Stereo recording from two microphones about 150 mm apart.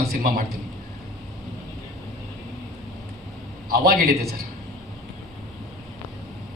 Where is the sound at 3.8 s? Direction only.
90° right.